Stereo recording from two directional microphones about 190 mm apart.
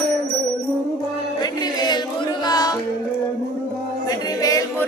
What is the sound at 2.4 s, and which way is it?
Music, 20° left (ahead or behind).